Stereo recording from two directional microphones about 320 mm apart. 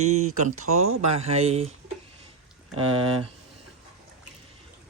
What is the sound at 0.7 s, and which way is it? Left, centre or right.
Speech, right.